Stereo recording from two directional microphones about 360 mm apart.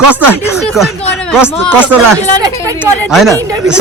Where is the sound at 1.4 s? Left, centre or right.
Centre.